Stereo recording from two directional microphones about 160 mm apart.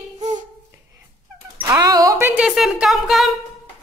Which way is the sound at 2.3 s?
5° right (ahead or behind).